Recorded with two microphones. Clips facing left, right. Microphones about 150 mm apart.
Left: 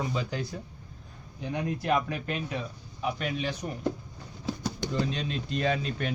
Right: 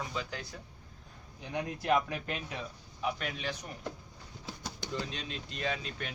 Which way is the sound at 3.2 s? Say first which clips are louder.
Left 6 dB; 10° left (ahead or behind).